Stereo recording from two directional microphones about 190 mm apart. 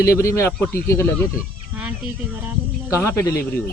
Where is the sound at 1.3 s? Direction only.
5° right (ahead or behind).